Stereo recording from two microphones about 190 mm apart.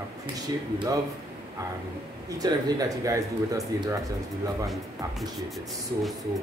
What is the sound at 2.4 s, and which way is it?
A man's voice, 20° right (ahead or behind).